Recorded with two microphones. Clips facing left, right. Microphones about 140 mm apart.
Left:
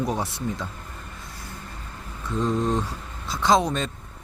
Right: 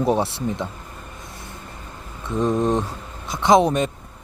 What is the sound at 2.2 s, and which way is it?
Speech, 20° right (ahead or behind).